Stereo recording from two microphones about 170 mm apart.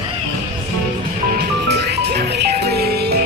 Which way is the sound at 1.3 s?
70° right (ahead or behind).